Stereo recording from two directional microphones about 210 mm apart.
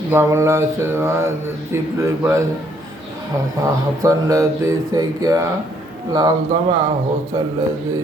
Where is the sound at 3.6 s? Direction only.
15° right (ahead or behind).